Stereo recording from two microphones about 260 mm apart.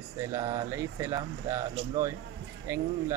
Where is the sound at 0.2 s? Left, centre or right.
Centre.